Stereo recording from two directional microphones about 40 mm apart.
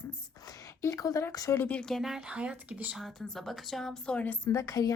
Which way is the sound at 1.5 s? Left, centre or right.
Left.